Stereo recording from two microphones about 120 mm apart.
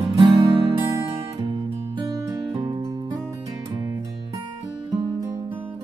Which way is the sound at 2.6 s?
35° right (ahead or behind).